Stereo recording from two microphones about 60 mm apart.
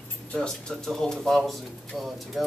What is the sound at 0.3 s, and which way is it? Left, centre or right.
Speech, centre.